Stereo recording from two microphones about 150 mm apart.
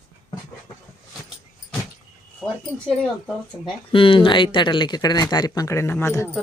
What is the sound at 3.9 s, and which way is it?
Speech, 35° left (ahead or behind).